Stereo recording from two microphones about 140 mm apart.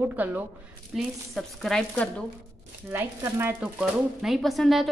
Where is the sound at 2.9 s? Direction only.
15° right (ahead or behind).